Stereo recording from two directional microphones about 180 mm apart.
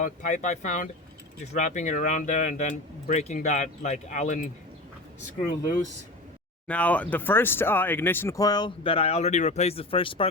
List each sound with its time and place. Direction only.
0.0 s speech: 45° left (ahead or behind)
6.7 s speech: 10° left (ahead or behind); by 10.2 s 30° left (ahead or behind)